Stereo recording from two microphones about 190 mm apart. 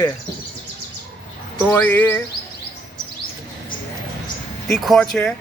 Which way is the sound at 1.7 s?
10° left (ahead or behind).